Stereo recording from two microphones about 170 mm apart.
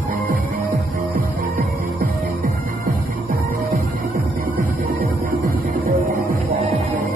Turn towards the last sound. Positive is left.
turn(degrees=-55)  # may be behind; listen again after turning